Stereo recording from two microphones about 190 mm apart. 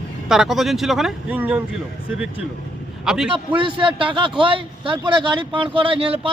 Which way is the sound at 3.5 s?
25° right (ahead or behind).